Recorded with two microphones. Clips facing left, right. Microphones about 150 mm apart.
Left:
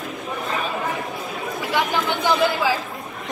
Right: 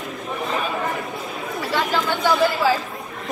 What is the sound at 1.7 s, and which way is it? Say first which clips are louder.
Chatter: even; 20° left (ahead or behind).